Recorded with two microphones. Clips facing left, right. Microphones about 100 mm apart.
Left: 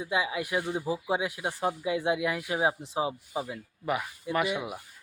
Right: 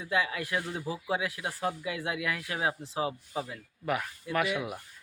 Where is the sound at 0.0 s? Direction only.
15° left (ahead or behind).